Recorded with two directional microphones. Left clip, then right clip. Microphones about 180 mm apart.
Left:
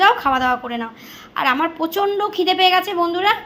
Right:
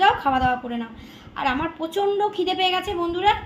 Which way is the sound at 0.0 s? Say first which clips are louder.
Left 4 dB; 15° left (ahead or behind).